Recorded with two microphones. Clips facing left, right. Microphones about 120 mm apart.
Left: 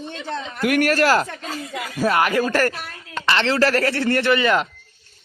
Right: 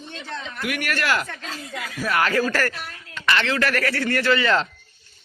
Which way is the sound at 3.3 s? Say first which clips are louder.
Left 4 dB; 30° left (ahead or behind).